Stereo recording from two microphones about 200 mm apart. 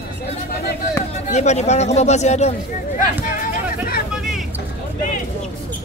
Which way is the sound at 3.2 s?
45° left (ahead or behind).